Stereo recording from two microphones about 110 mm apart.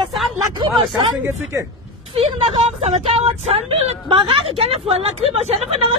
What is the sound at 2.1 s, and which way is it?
A woman's voice, 60° right (ahead or behind).